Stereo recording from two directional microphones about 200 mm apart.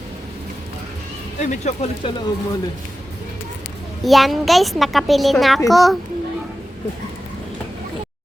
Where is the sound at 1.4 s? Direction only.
35° left (ahead or behind).